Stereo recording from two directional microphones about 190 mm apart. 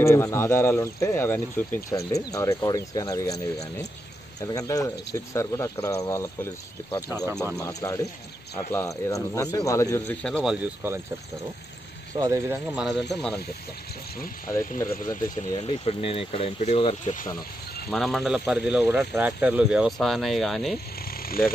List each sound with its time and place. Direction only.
0.0 s speech: 15° left (ahead or behind)
7.5 s speech: 15° left (ahead or behind)
10.2 s speech: centre (ahead or behind)
12.2 s speech: 15° right (ahead or behind)
13.1 s speech: 5° left (ahead or behind)
14.5 s speech: 15° left (ahead or behind); by 17.3 s 40° left (ahead or behind)
17.8 s speech: centre (ahead or behind)